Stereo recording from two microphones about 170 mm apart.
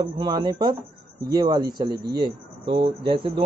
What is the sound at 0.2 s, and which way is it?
A man's voice, 25° right (ahead or behind).